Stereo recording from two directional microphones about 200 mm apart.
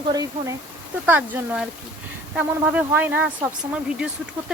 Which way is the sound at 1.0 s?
10° right (ahead or behind).